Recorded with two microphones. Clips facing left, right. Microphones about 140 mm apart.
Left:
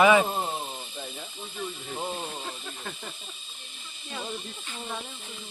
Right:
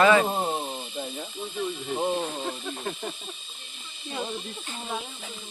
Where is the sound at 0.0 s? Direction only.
10° left (ahead or behind).